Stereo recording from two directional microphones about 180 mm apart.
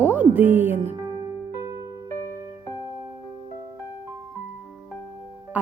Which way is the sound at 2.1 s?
15° left (ahead or behind).